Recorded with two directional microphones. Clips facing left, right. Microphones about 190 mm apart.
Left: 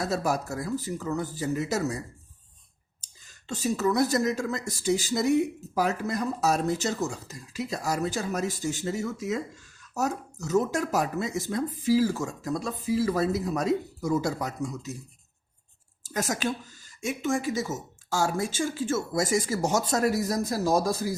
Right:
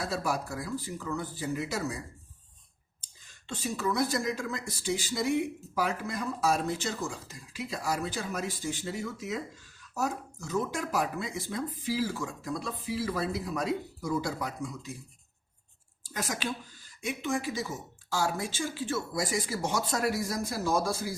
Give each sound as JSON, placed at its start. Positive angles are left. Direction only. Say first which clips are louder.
{"t": 0.0, "sound": "speech", "louder": "left 4 dB", "side_deg": 45}
{"t": 3.4, "sound": "speech", "louder": "left 6 dB", "side_deg": 40}
{"t": 16.0, "sound": "speech", "louder": "left 5 dB", "side_deg": 45}